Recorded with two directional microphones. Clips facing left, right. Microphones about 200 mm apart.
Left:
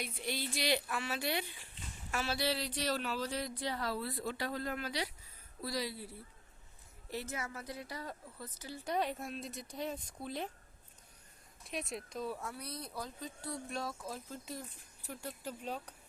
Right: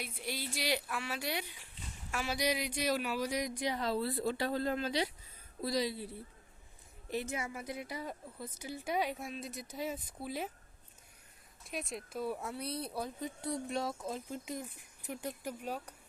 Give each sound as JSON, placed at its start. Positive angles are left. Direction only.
{"t": 0.0, "sound": "speech", "side_deg": -5}
{"t": 7.1, "sound": "speech", "side_deg": -15}
{"t": 11.6, "sound": "speech", "side_deg": 0}